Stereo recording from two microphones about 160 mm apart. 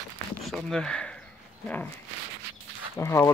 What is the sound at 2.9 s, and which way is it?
Speech, 15° left (ahead or behind).